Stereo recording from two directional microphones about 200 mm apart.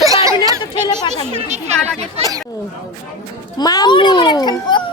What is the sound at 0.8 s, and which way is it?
Speech, 20° left (ahead or behind).